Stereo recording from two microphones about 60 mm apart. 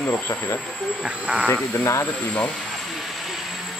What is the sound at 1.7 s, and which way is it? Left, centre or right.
Speech, left.